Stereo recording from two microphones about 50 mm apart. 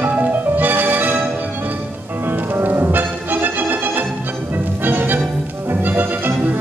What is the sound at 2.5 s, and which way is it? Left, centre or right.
Music, right.